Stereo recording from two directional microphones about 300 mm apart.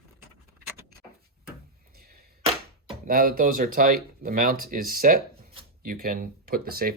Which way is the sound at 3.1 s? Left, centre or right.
Right.